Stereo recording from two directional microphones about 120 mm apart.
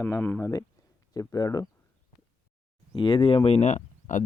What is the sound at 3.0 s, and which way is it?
Speech, 45° left (ahead or behind).